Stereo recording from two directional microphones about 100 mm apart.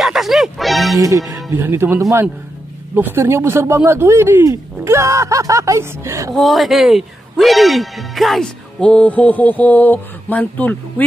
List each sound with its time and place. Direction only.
0.0 s music: centre (ahead or behind)
0.9 s speech: 35° right (ahead or behind)
1.5 s speech: 20° right (ahead or behind)
6.3 s speech: centre (ahead or behind); by 10.8 s 15° left (ahead or behind)